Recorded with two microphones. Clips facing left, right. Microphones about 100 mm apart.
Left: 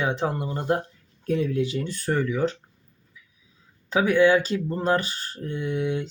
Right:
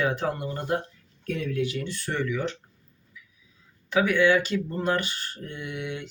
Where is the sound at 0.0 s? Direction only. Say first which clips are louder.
Left 1 dB; 25° left (ahead or behind).